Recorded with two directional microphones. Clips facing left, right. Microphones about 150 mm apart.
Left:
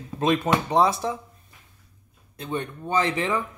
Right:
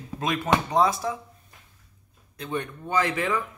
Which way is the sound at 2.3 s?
25° left (ahead or behind).